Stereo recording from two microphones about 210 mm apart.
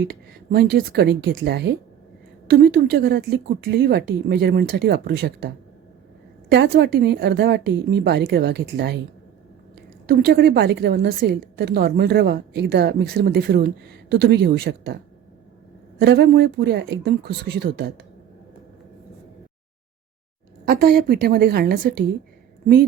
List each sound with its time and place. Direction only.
0.0 s a woman's voice: 50° right (ahead or behind)
6.5 s a woman's voice: 55° right (ahead or behind)
10.1 s a woman's voice: 50° right (ahead or behind)
16.0 s a woman's voice: 55° right (ahead or behind)
20.7 s a woman's voice: 45° right (ahead or behind)